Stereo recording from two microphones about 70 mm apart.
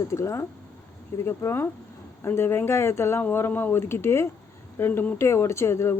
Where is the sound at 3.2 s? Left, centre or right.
Left.